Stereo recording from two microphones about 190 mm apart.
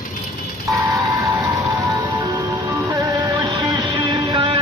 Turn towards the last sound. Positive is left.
turn(degrees=-25)  # may be behind; listen again after turning